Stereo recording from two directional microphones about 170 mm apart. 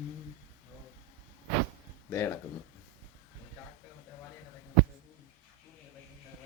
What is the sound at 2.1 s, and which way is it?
Speech, 15° left (ahead or behind).